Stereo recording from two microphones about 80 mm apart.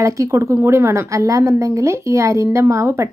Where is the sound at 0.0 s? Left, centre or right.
Right.